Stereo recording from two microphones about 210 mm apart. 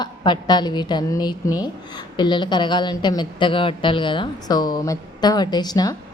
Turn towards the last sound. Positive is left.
turn(degrees=20)  # may be behind; listen again after turning